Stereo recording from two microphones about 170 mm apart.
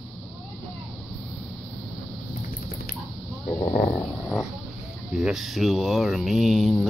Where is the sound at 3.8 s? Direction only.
Centre (ahead or behind).